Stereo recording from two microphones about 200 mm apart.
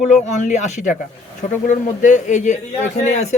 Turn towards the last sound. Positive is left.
turn(degrees=35)  # may be behind; listen again after turning